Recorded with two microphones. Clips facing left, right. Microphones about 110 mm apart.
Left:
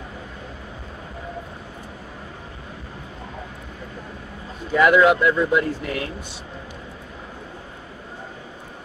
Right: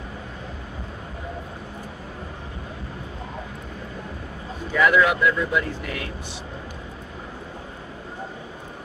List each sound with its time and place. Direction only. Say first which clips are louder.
4.8 s speech: left 3 dB; 25° left (ahead or behind)